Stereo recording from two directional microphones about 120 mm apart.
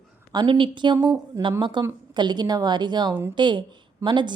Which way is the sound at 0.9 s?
25° right (ahead or behind).